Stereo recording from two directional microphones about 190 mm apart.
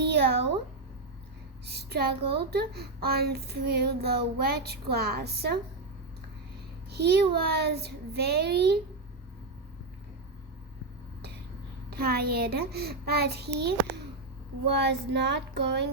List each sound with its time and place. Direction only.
0.0 s a sound: 60° right (ahead or behind)
1.6 s a child's voice: 60° right (ahead or behind)
6.9 s a child's voice: 60° right (ahead or behind)
11.9 s a child's voice: 55° right (ahead or behind)
14.8 s a child's voice: 60° right (ahead or behind)